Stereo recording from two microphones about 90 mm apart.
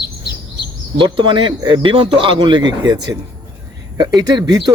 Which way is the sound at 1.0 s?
65° right (ahead or behind).